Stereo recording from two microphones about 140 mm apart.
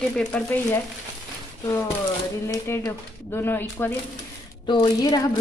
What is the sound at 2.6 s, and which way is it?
Speech, 20° left (ahead or behind).